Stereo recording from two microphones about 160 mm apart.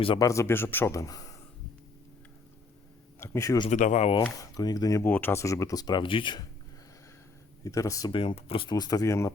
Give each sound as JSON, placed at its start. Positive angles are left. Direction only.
{"t": 0.2, "sound": "speech", "side_deg": 20}
{"t": 3.2, "sound": "speech", "side_deg": 15}
{"t": 3.7, "sound": "speech", "side_deg": 50}
{"t": 4.4, "sound": "speech", "side_deg": 20}
{"t": 7.6, "sound": "speech", "side_deg": 20}